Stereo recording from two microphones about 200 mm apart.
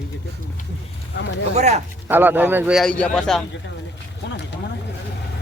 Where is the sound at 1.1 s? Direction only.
60° left (ahead or behind).